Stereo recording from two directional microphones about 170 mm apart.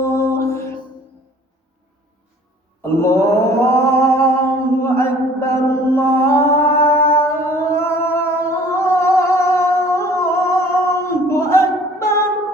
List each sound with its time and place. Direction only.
0.0 s music: 15° left (ahead or behind)
2.8 s mantra: 15° left (ahead or behind)